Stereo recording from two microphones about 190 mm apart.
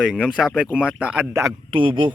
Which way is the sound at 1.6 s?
25° right (ahead or behind).